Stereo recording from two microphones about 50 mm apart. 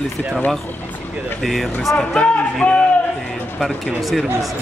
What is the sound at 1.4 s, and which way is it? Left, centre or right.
Speech, centre.